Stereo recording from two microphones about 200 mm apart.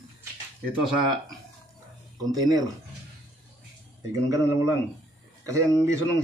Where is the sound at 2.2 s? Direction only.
20° right (ahead or behind).